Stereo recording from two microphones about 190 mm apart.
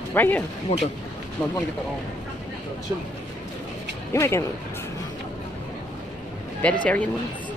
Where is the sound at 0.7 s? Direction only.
35° left (ahead or behind).